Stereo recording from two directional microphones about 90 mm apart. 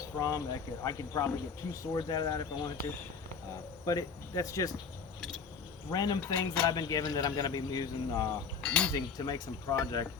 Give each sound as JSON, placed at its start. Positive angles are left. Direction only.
{"t": 0.0, "sound": "speech", "side_deg": 40}
{"t": 3.8, "sound": "speech", "side_deg": 40}
{"t": 5.9, "sound": "speech", "side_deg": 45}
{"t": 8.6, "sound": "speech", "side_deg": 15}
{"t": 8.9, "sound": "speech", "side_deg": 45}